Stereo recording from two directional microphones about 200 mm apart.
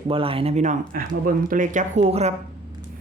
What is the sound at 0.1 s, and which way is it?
Speech, 25° right (ahead or behind).